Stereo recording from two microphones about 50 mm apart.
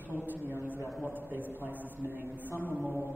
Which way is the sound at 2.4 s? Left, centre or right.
Left.